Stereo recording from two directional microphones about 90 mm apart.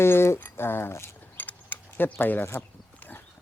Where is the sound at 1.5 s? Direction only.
20° left (ahead or behind).